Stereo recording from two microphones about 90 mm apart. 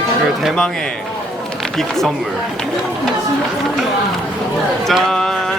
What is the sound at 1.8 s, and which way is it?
Speech, 5° left (ahead or behind).